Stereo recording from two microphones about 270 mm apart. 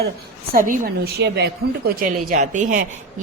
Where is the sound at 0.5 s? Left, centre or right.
Right.